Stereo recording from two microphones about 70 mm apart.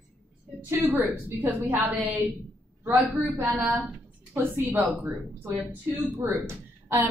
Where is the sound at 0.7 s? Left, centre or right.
Right.